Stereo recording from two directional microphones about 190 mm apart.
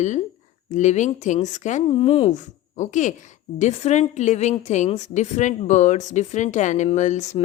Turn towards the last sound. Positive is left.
turn(degrees=40)  # may be behind; listen again after turning